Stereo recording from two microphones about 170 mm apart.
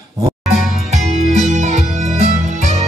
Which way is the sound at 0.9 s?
45° right (ahead or behind).